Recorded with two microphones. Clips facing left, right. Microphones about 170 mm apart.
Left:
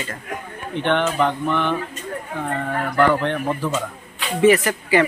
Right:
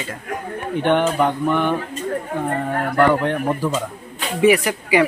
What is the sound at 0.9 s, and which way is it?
Speech, 10° right (ahead or behind).